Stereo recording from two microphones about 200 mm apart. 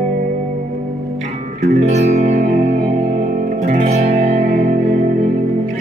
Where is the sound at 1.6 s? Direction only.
35° right (ahead or behind).